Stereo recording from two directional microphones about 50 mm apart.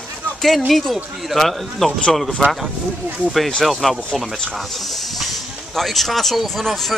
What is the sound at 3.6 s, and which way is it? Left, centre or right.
Speech, centre.